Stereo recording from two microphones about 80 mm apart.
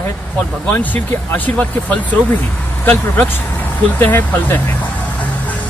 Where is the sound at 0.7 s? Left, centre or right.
Left.